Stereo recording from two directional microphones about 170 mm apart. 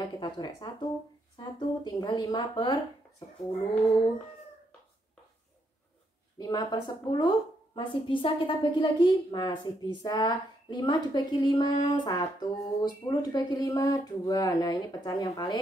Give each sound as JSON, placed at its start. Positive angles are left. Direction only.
{"t": 0.2, "sound": "a woman's voice", "side_deg": 25}
{"t": 6.3, "sound": "a woman's voice", "side_deg": 25}